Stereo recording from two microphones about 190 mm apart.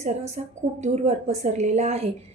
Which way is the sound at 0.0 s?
35° right (ahead or behind).